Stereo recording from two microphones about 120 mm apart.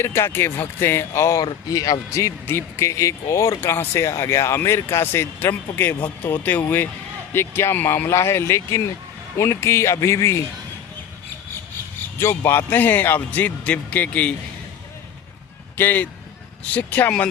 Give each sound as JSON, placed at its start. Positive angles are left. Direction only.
{"t": 0.0, "sound": "speech", "side_deg": 20}
{"t": 12.2, "sound": "a man's voice", "side_deg": 20}
{"t": 15.8, "sound": "a man's voice", "side_deg": 15}